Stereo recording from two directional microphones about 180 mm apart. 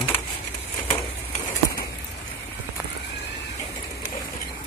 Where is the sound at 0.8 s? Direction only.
25° left (ahead or behind).